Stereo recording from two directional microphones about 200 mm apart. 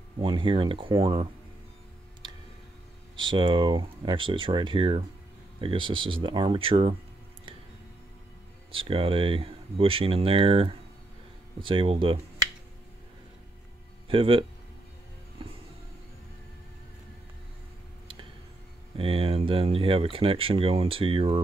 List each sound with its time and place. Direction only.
0.2 s speech: 25° right (ahead or behind)
3.2 s speech: 25° right (ahead or behind)
8.7 s speech: 25° right (ahead or behind)
14.0 s speech: 25° right (ahead or behind)
18.9 s speech: 25° right (ahead or behind)